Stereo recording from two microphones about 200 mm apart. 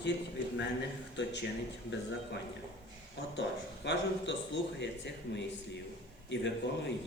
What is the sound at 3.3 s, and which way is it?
Speech, 60° left (ahead or behind).